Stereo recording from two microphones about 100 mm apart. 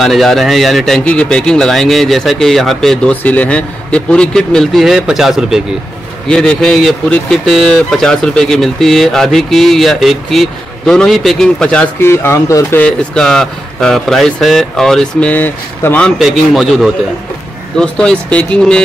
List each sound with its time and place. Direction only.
0.0 s speech: centre (ahead or behind)
3.1 s speech: 15° left (ahead or behind); by 5.6 s 5° right (ahead or behind)
6.2 s speech: 10° left (ahead or behind)
12.0 s speech: 25° left (ahead or behind)
12.7 s speech: 10° left (ahead or behind)
16.2 s speech: centre (ahead or behind)
17.7 s speech: 10° left (ahead or behind)